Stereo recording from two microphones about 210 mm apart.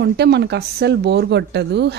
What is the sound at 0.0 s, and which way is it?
Speech, 55° right (ahead or behind).